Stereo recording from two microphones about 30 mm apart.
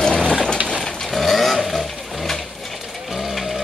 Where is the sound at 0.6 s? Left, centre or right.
Centre.